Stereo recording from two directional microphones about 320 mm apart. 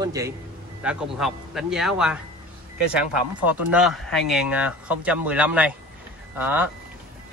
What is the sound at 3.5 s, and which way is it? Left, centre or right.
Speech, centre.